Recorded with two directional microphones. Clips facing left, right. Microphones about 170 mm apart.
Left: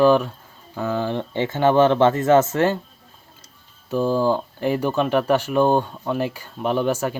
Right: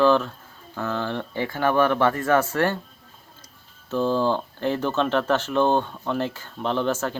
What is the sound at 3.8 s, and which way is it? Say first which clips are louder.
Speech: left 2 dB; 10° left (ahead or behind).